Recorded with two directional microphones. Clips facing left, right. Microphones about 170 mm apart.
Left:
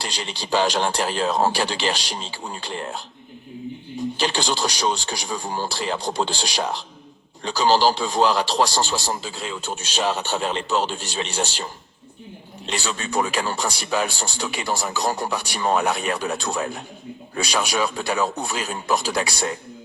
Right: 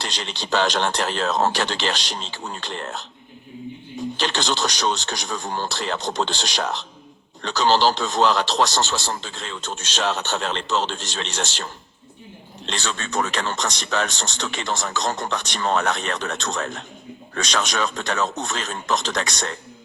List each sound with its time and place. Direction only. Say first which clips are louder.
0.0 s a man's voice: even; 10° left (ahead or behind)
4.2 s a man's voice: even; 10° left (ahead or behind)